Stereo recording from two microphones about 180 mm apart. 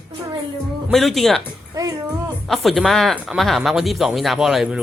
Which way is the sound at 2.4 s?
Centre (ahead or behind).